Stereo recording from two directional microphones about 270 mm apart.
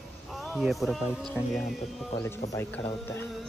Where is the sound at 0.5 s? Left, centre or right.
Centre.